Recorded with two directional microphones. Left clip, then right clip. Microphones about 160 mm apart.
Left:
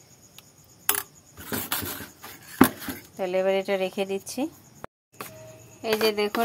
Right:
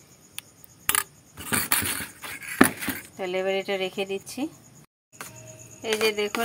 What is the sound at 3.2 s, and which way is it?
Speech, 15° left (ahead or behind).